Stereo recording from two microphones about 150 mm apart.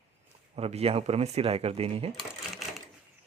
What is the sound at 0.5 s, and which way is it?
Speech, 40° right (ahead or behind).